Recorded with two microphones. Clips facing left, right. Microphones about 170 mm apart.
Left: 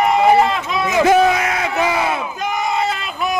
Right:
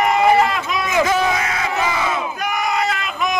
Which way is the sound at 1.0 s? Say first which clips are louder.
Left 8 dB; 55° left (ahead or behind).